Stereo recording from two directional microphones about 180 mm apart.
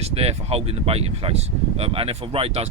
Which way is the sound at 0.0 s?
35° right (ahead or behind).